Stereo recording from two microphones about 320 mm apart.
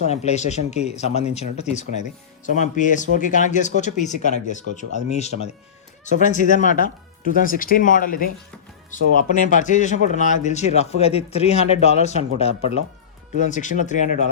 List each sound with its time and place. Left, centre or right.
0.1 s speech: left